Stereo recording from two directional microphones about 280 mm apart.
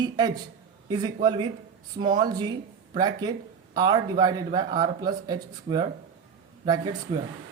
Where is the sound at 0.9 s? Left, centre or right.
Centre.